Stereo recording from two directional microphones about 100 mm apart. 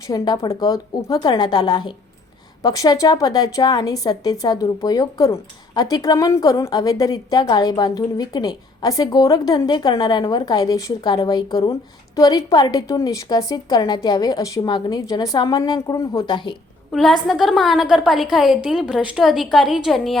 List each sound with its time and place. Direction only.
0.1 s a woman's voice: 40° left (ahead or behind)
16.9 s a woman's voice: centre (ahead or behind)